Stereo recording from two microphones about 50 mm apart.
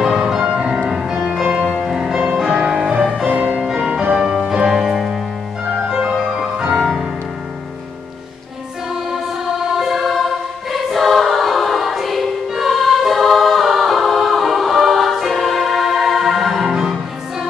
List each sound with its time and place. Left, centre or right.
0.0 s music: centre; by 3.6 s right
3.6 s music: centre
6.3 s music: centre
9.1 s music: centre
10.7 s choir: centre
16.6 s music: centre